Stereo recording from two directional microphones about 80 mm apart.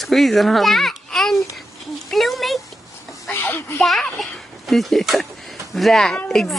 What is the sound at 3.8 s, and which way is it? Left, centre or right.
A child's voice, centre.